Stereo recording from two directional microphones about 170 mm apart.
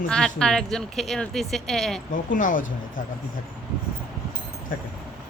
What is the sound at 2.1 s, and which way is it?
Speech, 50° left (ahead or behind).